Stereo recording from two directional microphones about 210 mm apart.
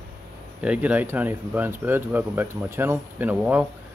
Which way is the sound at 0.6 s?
5° right (ahead or behind).